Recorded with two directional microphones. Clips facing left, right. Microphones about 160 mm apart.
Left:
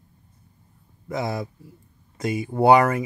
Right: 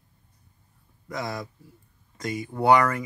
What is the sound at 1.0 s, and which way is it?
Speech, 25° left (ahead or behind).